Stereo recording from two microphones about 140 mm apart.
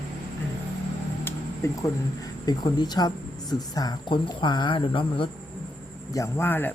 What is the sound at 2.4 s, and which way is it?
Speech, 30° left (ahead or behind).